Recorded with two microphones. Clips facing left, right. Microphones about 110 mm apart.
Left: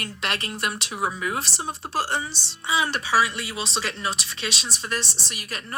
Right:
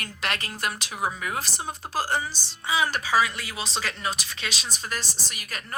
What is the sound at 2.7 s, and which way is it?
Speech, 20° left (ahead or behind).